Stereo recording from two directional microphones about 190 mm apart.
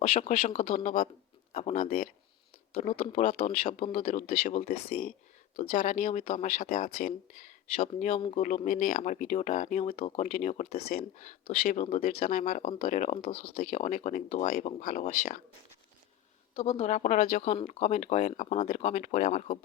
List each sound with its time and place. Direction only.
0.1 s speech: 40° left (ahead or behind)
3.0 s speech: 35° left (ahead or behind)
13.5 s speech: 45° left (ahead or behind)
16.6 s speech: 35° left (ahead or behind)